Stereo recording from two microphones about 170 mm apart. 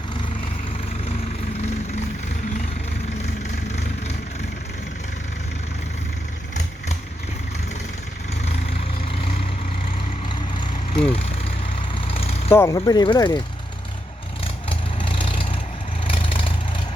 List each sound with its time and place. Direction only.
3.7 s vehicle: 40° left (ahead or behind)
10.9 s speech: 35° left (ahead or behind)
11.9 s vehicle: 35° left (ahead or behind)
12.5 s speech: 15° left (ahead or behind)
14.4 s vehicle: 30° left (ahead or behind)